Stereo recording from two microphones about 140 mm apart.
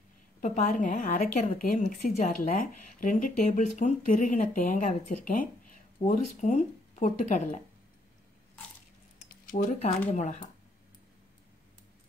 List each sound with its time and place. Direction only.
0.4 s speech: 70° left (ahead or behind)
1.9 s speech: 60° left (ahead or behind)
2.4 s speech: 80° left; by 7.6 s 60° left (ahead or behind)
9.5 s speech: 70° left (ahead or behind)
9.8 s speech: 50° left (ahead or behind)